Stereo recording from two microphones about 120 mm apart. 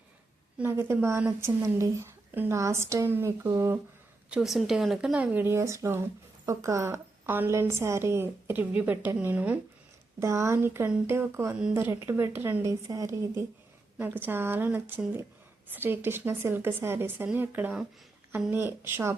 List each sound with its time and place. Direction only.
0.6 s a woman's voice: 20° right (ahead or behind)
4.3 s a woman's voice: centre (ahead or behind)
10.2 s a woman's voice: 25° right (ahead or behind)